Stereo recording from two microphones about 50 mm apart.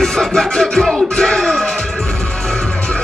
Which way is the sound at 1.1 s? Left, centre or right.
Centre.